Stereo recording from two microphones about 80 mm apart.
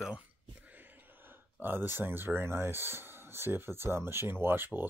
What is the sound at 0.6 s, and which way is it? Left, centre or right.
Speech, right.